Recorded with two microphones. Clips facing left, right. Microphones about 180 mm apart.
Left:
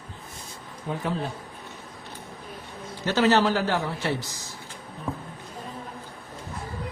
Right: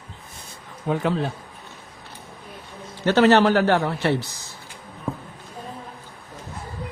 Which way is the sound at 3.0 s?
60° right (ahead or behind).